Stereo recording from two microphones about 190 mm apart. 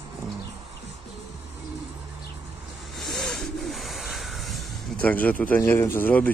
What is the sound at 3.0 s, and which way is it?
Bird, centre (ahead or behind).